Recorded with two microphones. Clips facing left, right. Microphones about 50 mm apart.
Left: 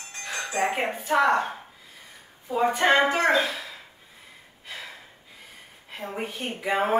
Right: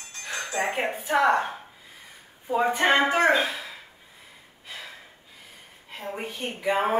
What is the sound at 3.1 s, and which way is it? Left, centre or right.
Speech, right.